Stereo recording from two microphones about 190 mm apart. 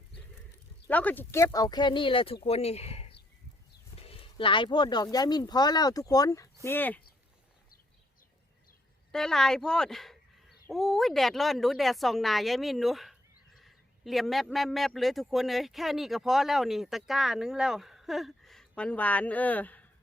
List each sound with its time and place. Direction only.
0.9 s speech: 10° left (ahead or behind); by 3.2 s 30° left (ahead or behind)
3.9 s a sound: 30° left (ahead or behind)
5.1 s speech: 20° left (ahead or behind)
9.1 s speech: centre (ahead or behind)